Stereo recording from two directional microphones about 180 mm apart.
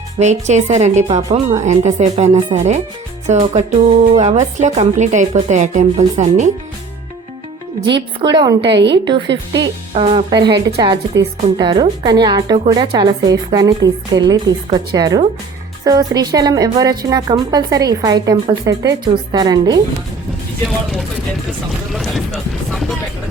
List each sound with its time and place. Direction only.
0.2 s a woman's voice: 40° right (ahead or behind)
7.9 s a woman's voice: 25° right (ahead or behind)
8.6 s a woman's voice: 75° right (ahead or behind)
9.9 s a woman's voice: 30° right (ahead or behind)
21.9 s a sound: centre (ahead or behind)